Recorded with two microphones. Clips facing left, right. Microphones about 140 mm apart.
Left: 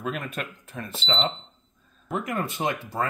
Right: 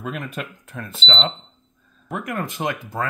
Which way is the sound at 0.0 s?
Centre (ahead or behind).